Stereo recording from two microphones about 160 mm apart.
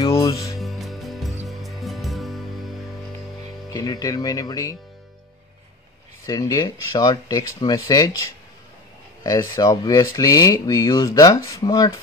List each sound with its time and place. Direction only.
0.6 s music: centre (ahead or behind)
3.7 s speech: 25° left (ahead or behind)
6.2 s speech: 25° left (ahead or behind)